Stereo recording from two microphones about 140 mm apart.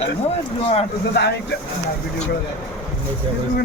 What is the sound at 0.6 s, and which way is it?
Speech, 45° left (ahead or behind).